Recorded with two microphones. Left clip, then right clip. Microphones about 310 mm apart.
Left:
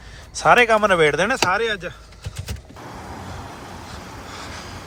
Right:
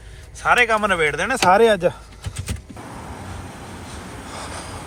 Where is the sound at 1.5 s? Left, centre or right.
Centre.